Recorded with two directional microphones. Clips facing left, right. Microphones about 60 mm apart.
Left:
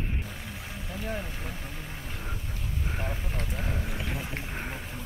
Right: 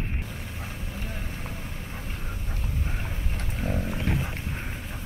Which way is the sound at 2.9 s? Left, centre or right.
Left.